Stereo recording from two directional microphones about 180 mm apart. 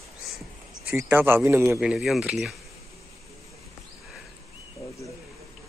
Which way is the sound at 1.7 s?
Centre (ahead or behind).